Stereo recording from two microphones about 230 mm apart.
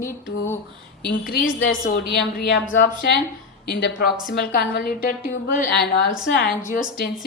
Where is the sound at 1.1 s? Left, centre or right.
Left.